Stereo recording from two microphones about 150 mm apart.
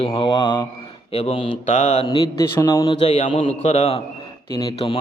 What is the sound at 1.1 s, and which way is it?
Speech, 45° left (ahead or behind).